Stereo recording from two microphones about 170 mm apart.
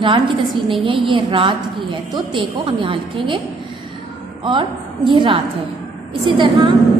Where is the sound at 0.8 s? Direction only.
30° right (ahead or behind).